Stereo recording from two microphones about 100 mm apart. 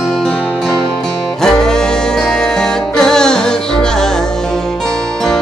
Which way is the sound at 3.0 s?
5° left (ahead or behind).